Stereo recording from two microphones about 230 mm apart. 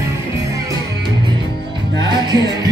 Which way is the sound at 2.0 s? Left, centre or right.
Centre.